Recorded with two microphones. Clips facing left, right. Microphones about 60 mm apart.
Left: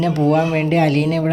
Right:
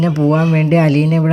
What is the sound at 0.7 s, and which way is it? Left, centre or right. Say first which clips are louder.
Speech: right 3 dB; right.